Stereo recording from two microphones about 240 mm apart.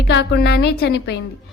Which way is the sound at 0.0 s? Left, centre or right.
Left.